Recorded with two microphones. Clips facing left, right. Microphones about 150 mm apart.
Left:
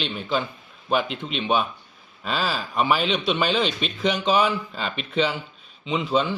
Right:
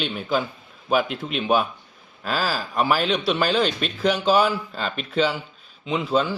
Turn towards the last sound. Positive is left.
turn(degrees=0)  # may be behind; listen again after turning